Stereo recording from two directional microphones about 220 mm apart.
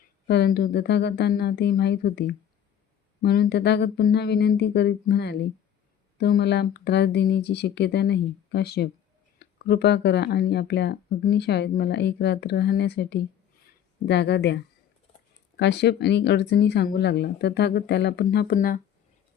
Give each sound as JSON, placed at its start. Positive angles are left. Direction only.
{"t": 0.3, "sound": "speech", "side_deg": 50}